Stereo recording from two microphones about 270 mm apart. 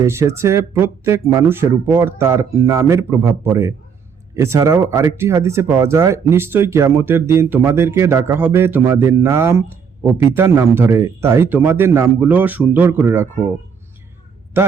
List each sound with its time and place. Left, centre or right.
0.0 s speech: centre
14.5 s a man's voice: centre